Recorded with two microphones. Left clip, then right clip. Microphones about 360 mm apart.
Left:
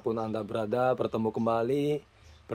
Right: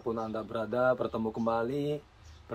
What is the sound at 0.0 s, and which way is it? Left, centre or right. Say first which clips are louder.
Speech: left 3 dB; left.